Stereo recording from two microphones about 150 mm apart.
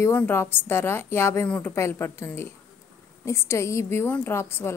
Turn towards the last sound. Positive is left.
turn(degrees=15)  # may be behind; listen again after turning